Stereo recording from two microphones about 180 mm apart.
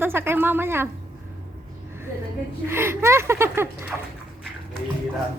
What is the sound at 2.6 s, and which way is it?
Speech, 15° right (ahead or behind).